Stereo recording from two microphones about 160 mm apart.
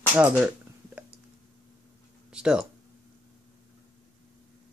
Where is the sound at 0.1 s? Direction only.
10° right (ahead or behind).